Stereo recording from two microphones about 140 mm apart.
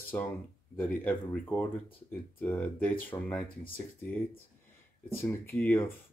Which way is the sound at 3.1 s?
25° left (ahead or behind).